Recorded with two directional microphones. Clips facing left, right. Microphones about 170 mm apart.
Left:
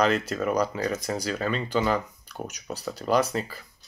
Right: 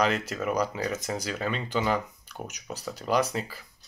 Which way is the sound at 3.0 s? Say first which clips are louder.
Left 2 dB; 15° right (ahead or behind).